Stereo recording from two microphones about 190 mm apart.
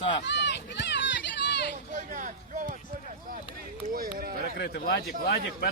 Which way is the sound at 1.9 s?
40° right (ahead or behind).